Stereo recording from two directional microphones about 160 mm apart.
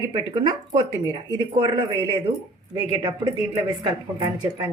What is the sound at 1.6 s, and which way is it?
Speech, 25° right (ahead or behind).